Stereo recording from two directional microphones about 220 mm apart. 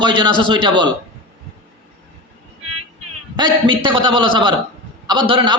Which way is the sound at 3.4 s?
20° right (ahead or behind).